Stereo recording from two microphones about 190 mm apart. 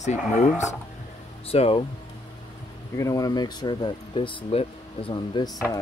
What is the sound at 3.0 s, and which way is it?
Speech, 20° left (ahead or behind).